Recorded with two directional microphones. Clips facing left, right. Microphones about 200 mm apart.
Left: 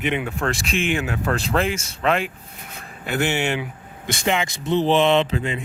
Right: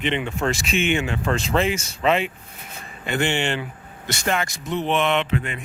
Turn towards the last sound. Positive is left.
turn(degrees=30)  # may be behind; listen again after turning